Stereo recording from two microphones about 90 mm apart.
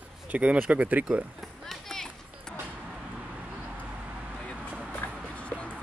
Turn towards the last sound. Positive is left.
turn(degrees=15)  # may be behind; listen again after turning